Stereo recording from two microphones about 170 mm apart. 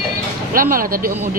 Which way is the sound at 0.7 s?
55° right (ahead or behind).